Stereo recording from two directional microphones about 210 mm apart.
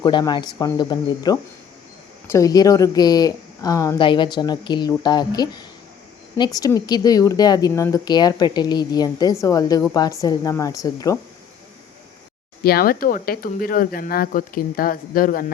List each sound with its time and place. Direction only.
0.0 s speech: 20° left (ahead or behind)
12.6 s speech: 45° left (ahead or behind)